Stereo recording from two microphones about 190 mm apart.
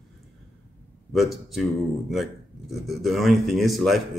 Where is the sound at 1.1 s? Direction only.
Centre (ahead or behind).